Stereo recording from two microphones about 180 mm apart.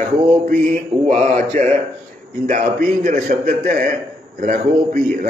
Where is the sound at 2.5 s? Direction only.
50° right (ahead or behind).